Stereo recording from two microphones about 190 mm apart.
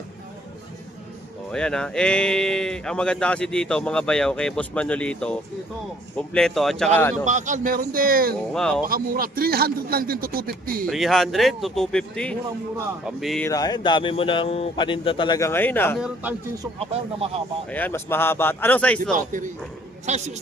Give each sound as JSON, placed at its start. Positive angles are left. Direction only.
{"t": 1.5, "sound": "speech", "side_deg": 5}
{"t": 7.3, "sound": "a man's voice", "side_deg": -40}
{"t": 8.5, "sound": "speech", "side_deg": 5}
{"t": 8.9, "sound": "a man's voice", "side_deg": -50}
{"t": 10.8, "sound": "speech", "side_deg": 0}
{"t": 13.4, "sound": "speech", "side_deg": 20}
{"t": 15.4, "sound": "speech", "side_deg": 15}
{"t": 16.0, "sound": "speech", "side_deg": -5}
{"t": 16.8, "sound": "speech", "side_deg": -30}
{"t": 17.7, "sound": "speech", "side_deg": 10}
{"t": 19.1, "sound": "a man's voice", "side_deg": -45}